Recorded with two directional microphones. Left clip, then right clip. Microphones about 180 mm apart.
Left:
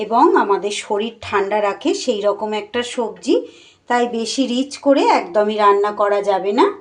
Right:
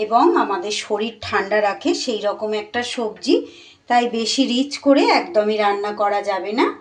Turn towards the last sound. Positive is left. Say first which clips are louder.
# left 4 dB
turn(degrees=20)  # may be behind; listen again after turning